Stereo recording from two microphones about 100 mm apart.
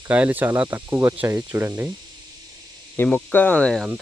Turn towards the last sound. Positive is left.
turn(degrees=10)  # may be behind; listen again after turning